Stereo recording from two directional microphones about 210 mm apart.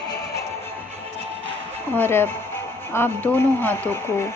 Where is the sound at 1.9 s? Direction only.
10° left (ahead or behind).